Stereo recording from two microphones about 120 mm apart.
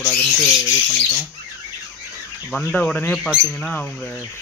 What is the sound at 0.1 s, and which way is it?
Speech, 5° left (ahead or behind).